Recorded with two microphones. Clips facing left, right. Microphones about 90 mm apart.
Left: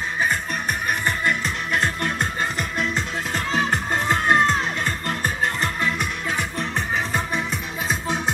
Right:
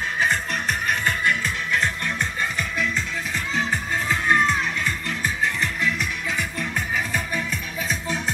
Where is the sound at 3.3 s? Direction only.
60° left (ahead or behind); by 7.9 s 25° left (ahead or behind).